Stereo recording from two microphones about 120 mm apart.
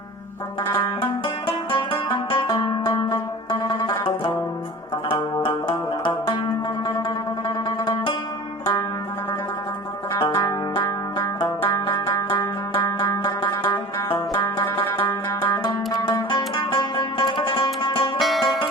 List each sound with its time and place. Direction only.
0.7 s music: 45° left (ahead or behind)
7.4 s music: 40° left (ahead or behind)
10.2 s music: 45° left (ahead or behind)
10.4 s music: 30° left (ahead or behind)
11.9 s banjo: 40° left (ahead or behind)
12.3 s music: 40° left (ahead or behind)
15.6 s music: 35° left (ahead or behind)
18.2 s music: centre (ahead or behind)